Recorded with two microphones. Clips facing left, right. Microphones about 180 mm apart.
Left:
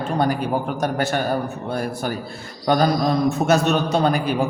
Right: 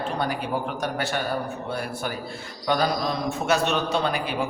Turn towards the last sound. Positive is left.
turn(degrees=45)  # may be behind; listen again after turning